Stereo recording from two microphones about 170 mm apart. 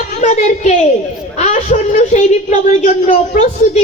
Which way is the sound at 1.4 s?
45° left (ahead or behind).